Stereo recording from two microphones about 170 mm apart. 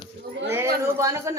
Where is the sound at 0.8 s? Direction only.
15° right (ahead or behind).